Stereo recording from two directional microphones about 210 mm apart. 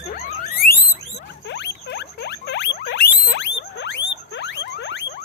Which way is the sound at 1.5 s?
55° left (ahead or behind).